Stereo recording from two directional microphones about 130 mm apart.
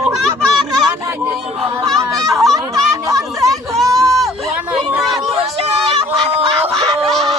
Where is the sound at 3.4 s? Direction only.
Centre (ahead or behind).